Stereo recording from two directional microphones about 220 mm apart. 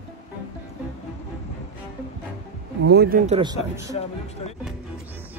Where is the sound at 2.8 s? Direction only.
45° right (ahead or behind).